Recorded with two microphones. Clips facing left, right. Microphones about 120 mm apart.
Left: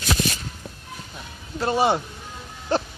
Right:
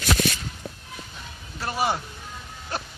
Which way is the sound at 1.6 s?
25° left (ahead or behind).